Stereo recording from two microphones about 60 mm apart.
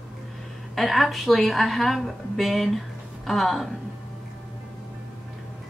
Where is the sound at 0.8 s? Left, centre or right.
Centre.